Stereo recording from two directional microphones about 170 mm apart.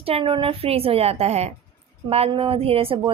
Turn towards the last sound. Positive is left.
turn(degrees=-30)  # may be behind; listen again after turning